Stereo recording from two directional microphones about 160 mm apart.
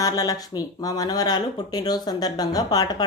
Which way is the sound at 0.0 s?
20° left (ahead or behind).